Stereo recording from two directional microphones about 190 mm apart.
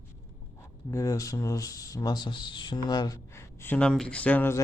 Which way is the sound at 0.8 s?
15° left (ahead or behind).